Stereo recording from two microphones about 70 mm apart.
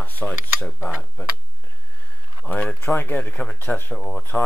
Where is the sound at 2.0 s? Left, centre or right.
Centre.